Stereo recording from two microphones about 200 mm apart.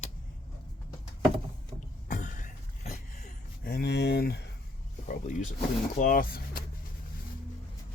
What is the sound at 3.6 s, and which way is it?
Speech, 50° left (ahead or behind).